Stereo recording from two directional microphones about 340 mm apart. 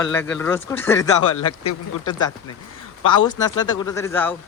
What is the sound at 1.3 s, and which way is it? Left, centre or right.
Speech, left.